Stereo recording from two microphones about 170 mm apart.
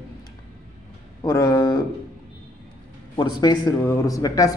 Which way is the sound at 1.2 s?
20° left (ahead or behind).